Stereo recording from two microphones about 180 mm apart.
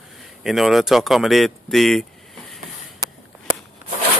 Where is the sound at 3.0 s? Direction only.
20° right (ahead or behind).